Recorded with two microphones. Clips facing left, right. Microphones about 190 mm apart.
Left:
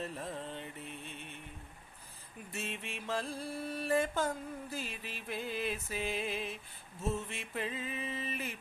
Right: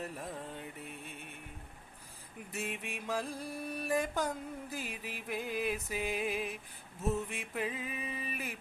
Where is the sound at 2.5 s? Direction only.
15° right (ahead or behind).